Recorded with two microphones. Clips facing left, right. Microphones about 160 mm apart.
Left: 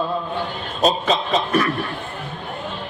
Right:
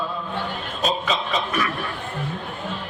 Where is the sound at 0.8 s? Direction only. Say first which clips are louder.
Left 5 dB; 35° left (ahead or behind).